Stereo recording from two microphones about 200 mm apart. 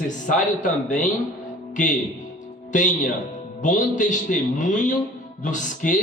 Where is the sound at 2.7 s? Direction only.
40° left (ahead or behind).